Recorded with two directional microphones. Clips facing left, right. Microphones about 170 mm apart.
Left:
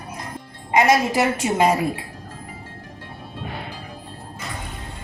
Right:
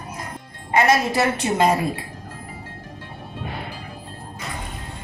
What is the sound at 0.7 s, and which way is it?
A woman's voice, 15° left (ahead or behind).